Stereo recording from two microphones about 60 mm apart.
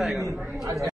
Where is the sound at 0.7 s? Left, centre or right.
Right.